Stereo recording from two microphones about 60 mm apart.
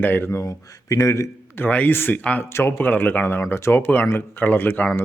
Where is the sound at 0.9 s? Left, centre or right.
Left.